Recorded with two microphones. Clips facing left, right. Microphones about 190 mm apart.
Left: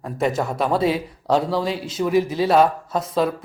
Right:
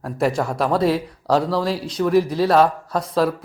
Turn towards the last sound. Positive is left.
turn(degrees=0)  # may be behind; listen again after turning